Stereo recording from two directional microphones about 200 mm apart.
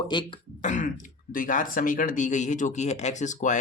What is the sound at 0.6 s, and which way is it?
Speech, 40° left (ahead or behind).